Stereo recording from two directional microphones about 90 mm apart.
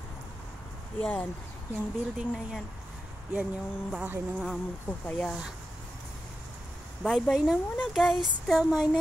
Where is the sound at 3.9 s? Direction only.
15° right (ahead or behind).